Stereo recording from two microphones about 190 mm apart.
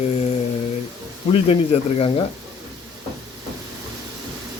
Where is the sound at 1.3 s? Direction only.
30° left (ahead or behind).